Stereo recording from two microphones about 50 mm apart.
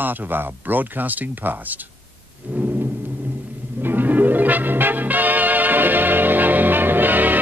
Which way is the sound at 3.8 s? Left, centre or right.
Right.